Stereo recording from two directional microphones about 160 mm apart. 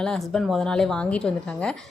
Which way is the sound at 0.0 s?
5° left (ahead or behind).